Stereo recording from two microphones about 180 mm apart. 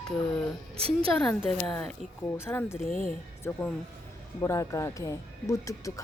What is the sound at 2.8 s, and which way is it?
Speech, 45° left (ahead or behind).